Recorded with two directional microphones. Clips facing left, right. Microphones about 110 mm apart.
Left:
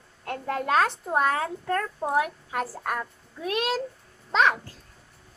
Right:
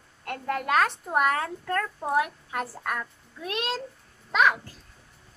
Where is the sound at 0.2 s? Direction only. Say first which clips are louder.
Left 1 dB; 25° left (ahead or behind).